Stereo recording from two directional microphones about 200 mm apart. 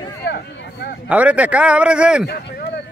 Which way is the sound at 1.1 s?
5° right (ahead or behind).